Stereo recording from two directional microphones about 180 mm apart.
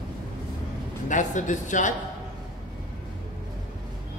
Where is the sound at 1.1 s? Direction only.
45° left (ahead or behind).